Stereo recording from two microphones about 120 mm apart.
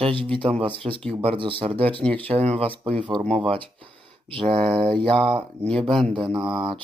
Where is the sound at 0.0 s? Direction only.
45° right (ahead or behind).